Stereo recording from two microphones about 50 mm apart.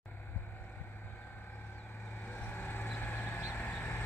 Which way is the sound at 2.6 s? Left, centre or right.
Left.